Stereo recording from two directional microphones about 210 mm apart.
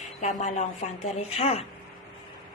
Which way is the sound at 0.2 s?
35° left (ahead or behind).